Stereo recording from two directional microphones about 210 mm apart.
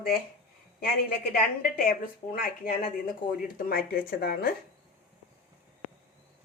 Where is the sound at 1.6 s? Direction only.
40° left (ahead or behind).